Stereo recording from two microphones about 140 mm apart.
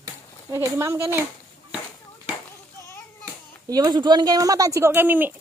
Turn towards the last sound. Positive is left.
turn(degrees=-15)  # may be behind; listen again after turning